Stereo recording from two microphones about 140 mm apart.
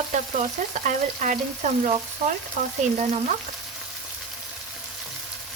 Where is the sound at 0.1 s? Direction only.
60° right (ahead or behind).